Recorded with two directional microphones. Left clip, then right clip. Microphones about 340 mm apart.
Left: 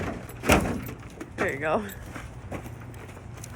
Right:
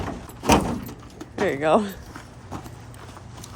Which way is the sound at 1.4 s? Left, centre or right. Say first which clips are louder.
Right 7 dB; right.